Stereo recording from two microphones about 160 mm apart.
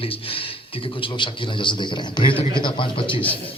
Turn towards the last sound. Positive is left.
turn(degrees=35)  # may be behind; listen again after turning